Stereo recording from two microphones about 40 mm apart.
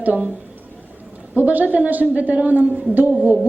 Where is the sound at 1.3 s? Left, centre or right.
Right.